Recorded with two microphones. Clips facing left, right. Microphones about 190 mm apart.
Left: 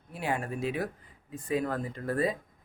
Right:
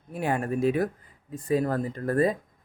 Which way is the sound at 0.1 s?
50° right (ahead or behind).